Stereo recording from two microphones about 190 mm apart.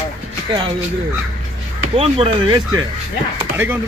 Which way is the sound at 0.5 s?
25° right (ahead or behind).